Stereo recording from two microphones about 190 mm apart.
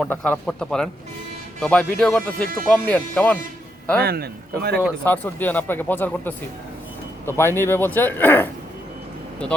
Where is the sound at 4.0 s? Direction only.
55° right (ahead or behind).